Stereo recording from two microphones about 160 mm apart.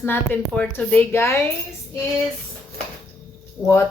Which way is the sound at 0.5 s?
10° left (ahead or behind).